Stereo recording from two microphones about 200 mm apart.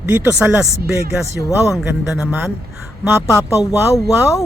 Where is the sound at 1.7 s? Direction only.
Centre (ahead or behind).